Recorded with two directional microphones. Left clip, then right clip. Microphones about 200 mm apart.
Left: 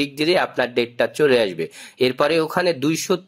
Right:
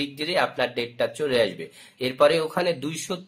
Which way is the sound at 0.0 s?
45° left (ahead or behind).